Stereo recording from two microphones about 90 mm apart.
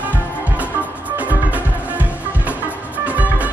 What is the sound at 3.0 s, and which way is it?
Music, 15° right (ahead or behind).